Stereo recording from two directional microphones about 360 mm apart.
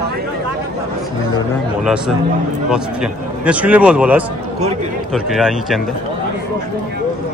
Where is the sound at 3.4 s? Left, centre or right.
Centre.